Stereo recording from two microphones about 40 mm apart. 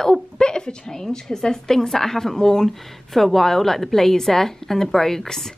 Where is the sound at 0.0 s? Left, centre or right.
Centre.